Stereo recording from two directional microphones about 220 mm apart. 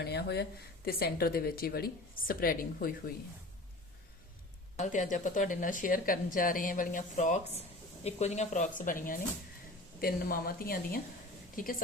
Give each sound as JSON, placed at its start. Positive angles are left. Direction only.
{"t": 0.0, "sound": "a woman's voice", "side_deg": 50}
{"t": 4.8, "sound": "a woman's voice", "side_deg": 35}